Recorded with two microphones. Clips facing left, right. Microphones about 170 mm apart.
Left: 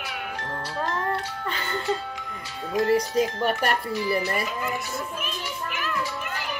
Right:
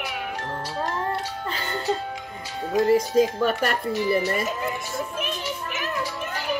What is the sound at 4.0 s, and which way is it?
Speech, 30° right (ahead or behind).